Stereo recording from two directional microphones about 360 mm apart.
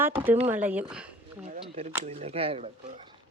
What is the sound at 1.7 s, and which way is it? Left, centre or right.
Speech, centre.